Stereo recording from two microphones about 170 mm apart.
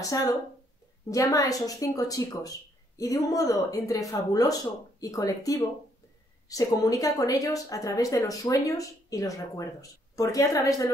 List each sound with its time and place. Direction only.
0.0 s speech: 20° left (ahead or behind)